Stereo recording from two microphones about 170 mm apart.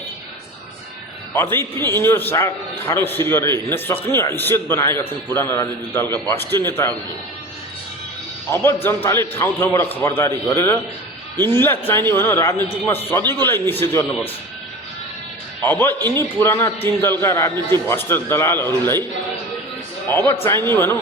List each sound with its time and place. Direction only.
1.3 s a man's voice: 15° left (ahead or behind)
8.4 s a man's voice: 15° left (ahead or behind)
15.6 s a man's voice: 10° left (ahead or behind)
16.0 s a man's voice: 25° right (ahead or behind)
16.4 s a man's voice: 15° left (ahead or behind)
20.1 s a man's voice: 15° left (ahead or behind)